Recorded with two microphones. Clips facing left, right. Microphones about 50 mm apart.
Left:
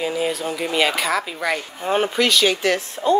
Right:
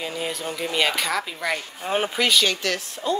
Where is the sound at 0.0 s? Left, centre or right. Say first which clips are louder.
Left 6 dB; centre.